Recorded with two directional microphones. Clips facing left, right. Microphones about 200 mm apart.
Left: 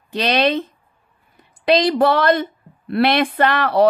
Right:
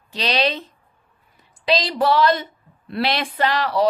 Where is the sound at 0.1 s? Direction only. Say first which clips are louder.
Left 5 dB; 55° left (ahead or behind).